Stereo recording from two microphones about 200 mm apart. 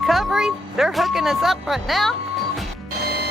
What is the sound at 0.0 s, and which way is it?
Speech, centre (ahead or behind).